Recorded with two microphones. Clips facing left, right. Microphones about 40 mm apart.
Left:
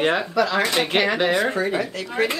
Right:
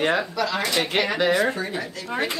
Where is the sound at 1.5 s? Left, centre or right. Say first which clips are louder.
Left 6 dB; left.